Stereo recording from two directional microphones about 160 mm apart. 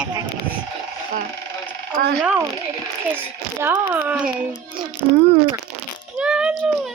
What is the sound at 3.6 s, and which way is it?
Speech, 15° right (ahead or behind).